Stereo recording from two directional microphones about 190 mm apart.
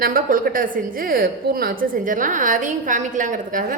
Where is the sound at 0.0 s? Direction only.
45° right (ahead or behind).